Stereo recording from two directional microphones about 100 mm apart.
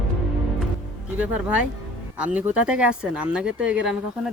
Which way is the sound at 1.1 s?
15° right (ahead or behind).